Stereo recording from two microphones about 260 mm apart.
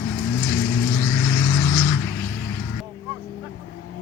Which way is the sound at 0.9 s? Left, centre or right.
Centre.